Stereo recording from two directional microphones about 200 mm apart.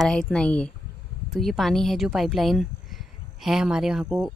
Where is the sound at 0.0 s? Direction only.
5° left (ahead or behind).